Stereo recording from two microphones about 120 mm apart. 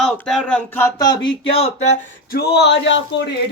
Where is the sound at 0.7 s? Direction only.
20° left (ahead or behind).